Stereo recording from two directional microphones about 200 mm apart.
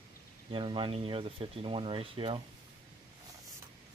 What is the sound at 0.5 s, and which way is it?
Speech, 25° right (ahead or behind).